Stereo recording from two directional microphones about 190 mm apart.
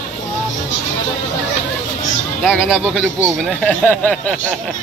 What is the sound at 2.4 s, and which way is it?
Speech, 5° right (ahead or behind).